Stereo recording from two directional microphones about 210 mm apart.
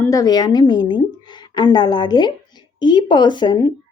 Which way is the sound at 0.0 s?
15° left (ahead or behind).